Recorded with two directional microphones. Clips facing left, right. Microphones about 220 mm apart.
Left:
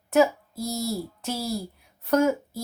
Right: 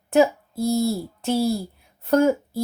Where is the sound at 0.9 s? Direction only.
30° right (ahead or behind).